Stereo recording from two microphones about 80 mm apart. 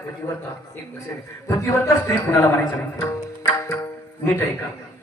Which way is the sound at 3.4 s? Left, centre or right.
Left.